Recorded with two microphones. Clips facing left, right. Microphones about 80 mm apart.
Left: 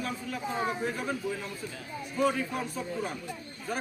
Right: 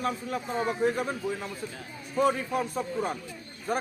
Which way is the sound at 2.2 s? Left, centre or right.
Right.